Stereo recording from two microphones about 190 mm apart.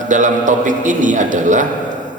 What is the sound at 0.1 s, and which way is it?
A man's voice, 40° right (ahead or behind).